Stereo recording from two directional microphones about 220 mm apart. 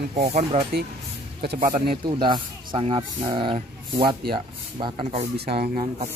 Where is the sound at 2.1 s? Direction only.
20° right (ahead or behind).